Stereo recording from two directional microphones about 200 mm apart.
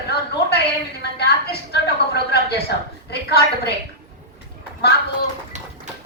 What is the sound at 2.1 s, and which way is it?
A woman's voice, 55° left (ahead or behind).